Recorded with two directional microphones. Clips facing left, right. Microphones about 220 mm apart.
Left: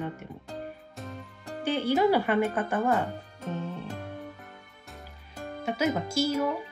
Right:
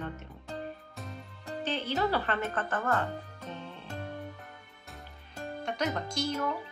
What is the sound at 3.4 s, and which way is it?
Music, 45° left (ahead or behind).